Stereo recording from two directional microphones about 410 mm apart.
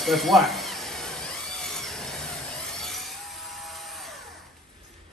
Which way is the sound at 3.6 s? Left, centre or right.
Centre.